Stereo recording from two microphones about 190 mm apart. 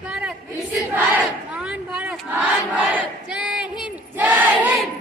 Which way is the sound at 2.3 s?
5° right (ahead or behind).